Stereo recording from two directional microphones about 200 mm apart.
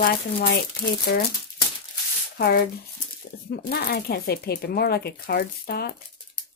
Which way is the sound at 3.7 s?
50° left (ahead or behind).